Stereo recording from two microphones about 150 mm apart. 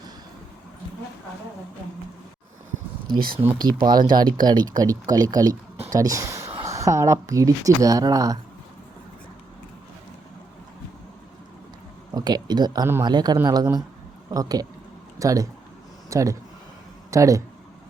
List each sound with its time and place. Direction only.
3.1 s speech: 75° right (ahead or behind)
3.7 s speech: 30° right (ahead or behind)
12.1 s speech: 30° right (ahead or behind)